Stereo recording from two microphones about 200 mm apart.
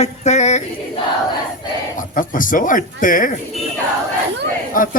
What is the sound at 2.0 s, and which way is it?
A man's voice, 40° left (ahead or behind).